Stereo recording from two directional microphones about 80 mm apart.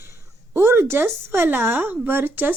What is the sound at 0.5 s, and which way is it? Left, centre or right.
A woman's voice, right.